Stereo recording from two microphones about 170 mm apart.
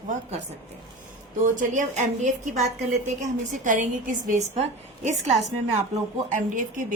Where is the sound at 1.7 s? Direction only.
50° right (ahead or behind).